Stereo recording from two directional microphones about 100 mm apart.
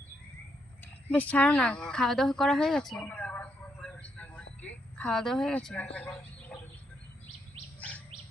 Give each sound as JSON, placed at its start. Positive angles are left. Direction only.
{"t": 1.0, "sound": "speech", "side_deg": 15}
{"t": 3.1, "sound": "vehicle", "side_deg": 15}
{"t": 6.5, "sound": "bird", "side_deg": 15}
{"t": 7.8, "sound": "chirp", "side_deg": 15}